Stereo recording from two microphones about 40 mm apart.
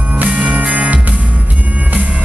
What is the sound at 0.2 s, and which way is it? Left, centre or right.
Music, right.